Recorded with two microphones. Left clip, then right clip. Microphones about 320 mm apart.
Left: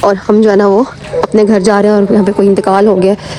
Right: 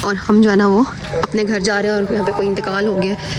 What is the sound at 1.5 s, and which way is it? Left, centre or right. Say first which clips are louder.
Speech: left 9 dB; left.